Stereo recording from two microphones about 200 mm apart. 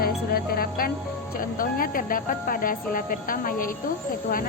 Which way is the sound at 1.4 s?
45° left (ahead or behind).